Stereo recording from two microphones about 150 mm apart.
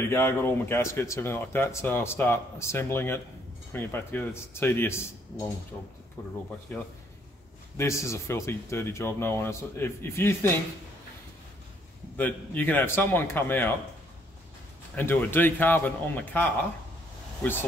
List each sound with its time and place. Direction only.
0.1 s speech: 15° left (ahead or behind)
6.7 s speech: 10° left (ahead or behind)
12.2 s speech: 10° left (ahead or behind)
15.0 s speech: 15° left (ahead or behind)